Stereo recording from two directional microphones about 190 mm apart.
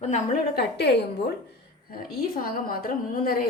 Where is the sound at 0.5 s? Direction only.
60° left (ahead or behind).